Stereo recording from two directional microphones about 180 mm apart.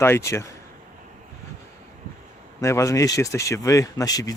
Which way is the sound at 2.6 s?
15° left (ahead or behind).